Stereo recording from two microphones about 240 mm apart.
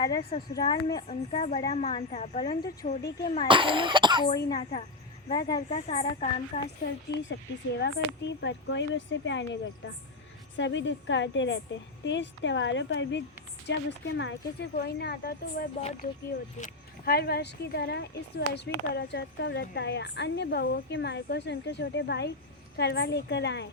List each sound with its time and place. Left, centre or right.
0.0 s a child's voice: left
3.4 s a child's voice: right
4.4 s a woman's voice: left
5.7 s a woman's voice: left
6.8 s speech: left
10.6 s speech: left
15.8 s a woman's voice: left